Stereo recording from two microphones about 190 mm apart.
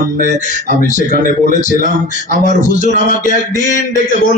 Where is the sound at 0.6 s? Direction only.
45° left (ahead or behind).